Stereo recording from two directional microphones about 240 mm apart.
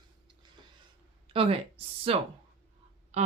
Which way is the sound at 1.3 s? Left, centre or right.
Right.